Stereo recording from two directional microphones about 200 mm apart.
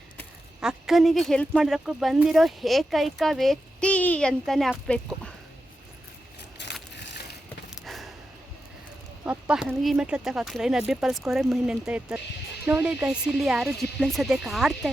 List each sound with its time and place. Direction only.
0.6 s speech: centre (ahead or behind)
6.6 s crushing: 60° left (ahead or behind)
6.9 s vehicle: 60° left (ahead or behind)
7.8 s a sound: centre (ahead or behind)
9.2 s speech: 5° right (ahead or behind)